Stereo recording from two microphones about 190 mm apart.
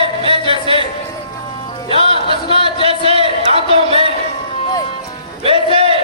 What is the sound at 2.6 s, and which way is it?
Speech, 30° right (ahead or behind).